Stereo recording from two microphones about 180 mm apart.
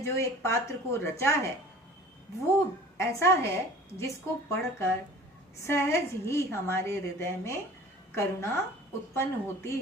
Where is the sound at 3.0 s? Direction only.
15° left (ahead or behind).